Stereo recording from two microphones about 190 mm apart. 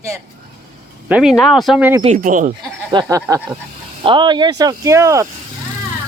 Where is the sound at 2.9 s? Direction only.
20° right (ahead or behind).